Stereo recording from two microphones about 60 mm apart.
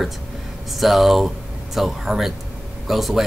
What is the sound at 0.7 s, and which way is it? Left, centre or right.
Speech, centre.